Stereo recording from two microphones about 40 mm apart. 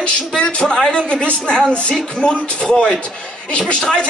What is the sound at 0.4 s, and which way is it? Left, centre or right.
A man's voice, left.